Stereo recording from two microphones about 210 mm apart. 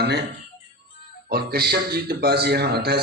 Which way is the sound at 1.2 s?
45° right (ahead or behind).